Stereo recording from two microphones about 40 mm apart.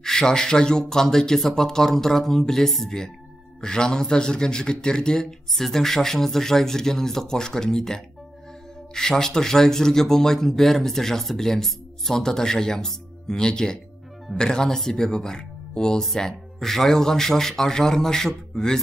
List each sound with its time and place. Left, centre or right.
0.0 s a man's voice: centre
5.5 s speech: centre